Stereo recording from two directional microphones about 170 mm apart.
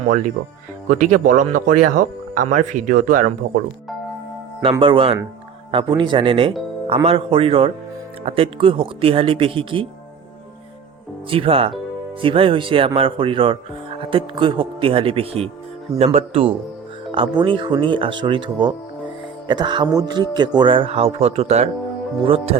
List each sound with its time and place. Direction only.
0.1 s speech: 45° right (ahead or behind)
4.8 s speech: 30° right (ahead or behind)
11.3 s speech: 35° right (ahead or behind)